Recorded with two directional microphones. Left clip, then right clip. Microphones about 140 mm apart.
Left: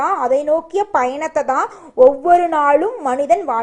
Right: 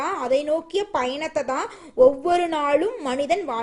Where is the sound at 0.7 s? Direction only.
15° right (ahead or behind).